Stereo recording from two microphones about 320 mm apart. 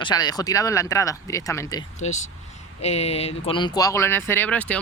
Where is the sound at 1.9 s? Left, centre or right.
Left.